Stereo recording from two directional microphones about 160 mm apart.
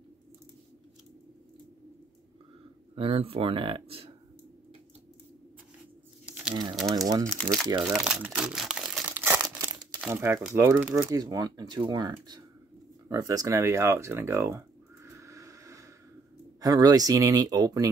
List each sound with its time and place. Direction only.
3.0 s speech: 35° right (ahead or behind)
6.5 s speech: 30° right (ahead or behind)
6.8 s speech: centre (ahead or behind)
7.1 s speech: 20° right (ahead or behind)
7.8 s speech: centre (ahead or behind)
9.1 s crumpling: 10° right (ahead or behind)
9.9 s speech: 15° right (ahead or behind)
15.0 s a sound: 20° right (ahead or behind)
16.6 s speech: 25° right (ahead or behind)